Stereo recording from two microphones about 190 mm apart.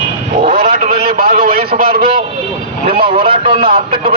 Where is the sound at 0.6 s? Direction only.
35° right (ahead or behind).